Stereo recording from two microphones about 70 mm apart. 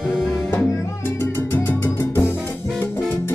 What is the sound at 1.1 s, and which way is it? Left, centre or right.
Music, left.